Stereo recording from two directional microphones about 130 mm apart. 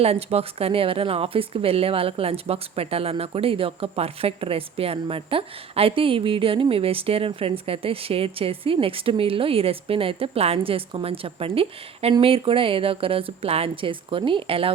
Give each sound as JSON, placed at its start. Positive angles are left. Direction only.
{"t": 0.0, "sound": "a woman's voice", "side_deg": -50}